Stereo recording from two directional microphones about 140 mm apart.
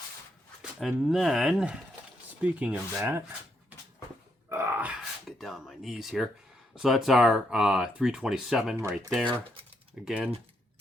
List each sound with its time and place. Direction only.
0.6 s speech: centre (ahead or behind); by 3.2 s 15° right (ahead or behind)
4.4 s a sound: 20° right (ahead or behind)
5.4 s speech: centre (ahead or behind)
8.7 s speech: 20° right (ahead or behind)
9.0 s speech: centre (ahead or behind)
10.1 s speech: 10° right (ahead or behind)